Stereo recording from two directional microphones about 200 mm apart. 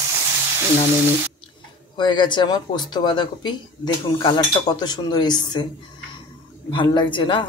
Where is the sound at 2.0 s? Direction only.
20° left (ahead or behind).